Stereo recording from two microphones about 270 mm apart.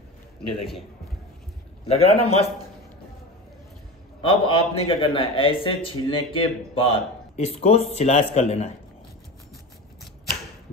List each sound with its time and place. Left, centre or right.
1.9 s a man's voice: left
4.2 s a man's voice: centre